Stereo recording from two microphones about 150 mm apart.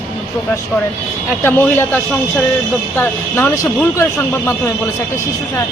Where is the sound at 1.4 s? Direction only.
10° left (ahead or behind).